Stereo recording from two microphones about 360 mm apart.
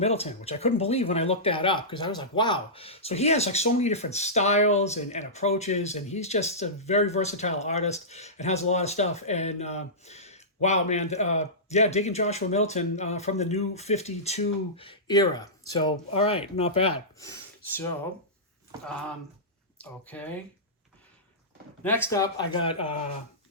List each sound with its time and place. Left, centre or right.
0.0 s speech: centre
19.8 s speech: centre
21.8 s speech: centre